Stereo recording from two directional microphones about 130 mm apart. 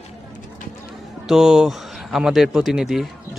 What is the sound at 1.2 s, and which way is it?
Speech, 5° right (ahead or behind).